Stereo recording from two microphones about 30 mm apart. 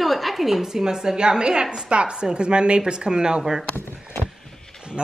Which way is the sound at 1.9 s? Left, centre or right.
Right.